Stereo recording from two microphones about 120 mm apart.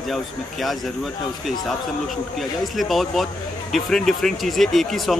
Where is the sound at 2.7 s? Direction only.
Centre (ahead or behind).